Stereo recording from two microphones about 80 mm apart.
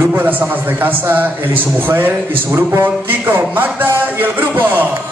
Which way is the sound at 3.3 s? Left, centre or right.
Right.